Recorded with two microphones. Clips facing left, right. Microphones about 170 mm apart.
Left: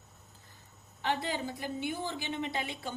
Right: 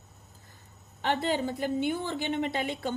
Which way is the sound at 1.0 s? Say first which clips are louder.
Right 5 dB; 65° right (ahead or behind).